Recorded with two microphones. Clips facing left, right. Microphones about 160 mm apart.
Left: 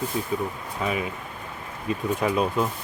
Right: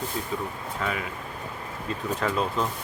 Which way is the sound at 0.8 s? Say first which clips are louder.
Left 4 dB; 20° left (ahead or behind).